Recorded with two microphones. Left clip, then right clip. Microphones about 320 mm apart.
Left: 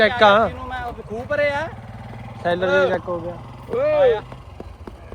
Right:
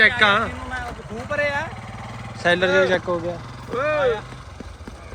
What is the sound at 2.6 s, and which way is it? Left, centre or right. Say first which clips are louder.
Speech: left 3 dB; left.